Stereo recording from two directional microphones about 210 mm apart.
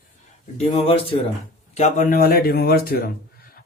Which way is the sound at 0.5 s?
30° left (ahead or behind).